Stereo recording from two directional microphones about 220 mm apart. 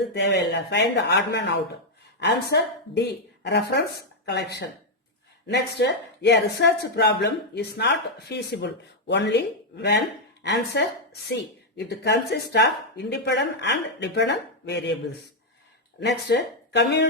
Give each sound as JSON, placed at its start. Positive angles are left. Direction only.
{"t": 0.1, "sound": "speech", "side_deg": 50}
{"t": 16.0, "sound": "speech", "side_deg": 50}